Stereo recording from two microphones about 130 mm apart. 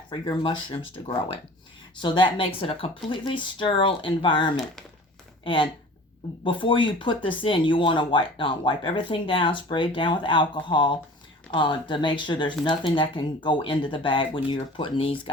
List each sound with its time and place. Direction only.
0.1 s speech: 40° left (ahead or behind)
6.4 s speech: 40° left (ahead or behind)